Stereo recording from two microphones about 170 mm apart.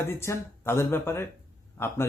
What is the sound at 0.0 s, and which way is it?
A man's voice, 15° left (ahead or behind).